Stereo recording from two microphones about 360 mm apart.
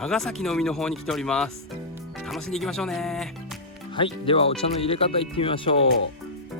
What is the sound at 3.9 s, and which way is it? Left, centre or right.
Speech, centre.